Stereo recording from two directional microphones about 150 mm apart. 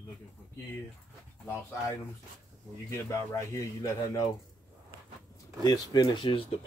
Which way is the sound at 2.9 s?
20° left (ahead or behind).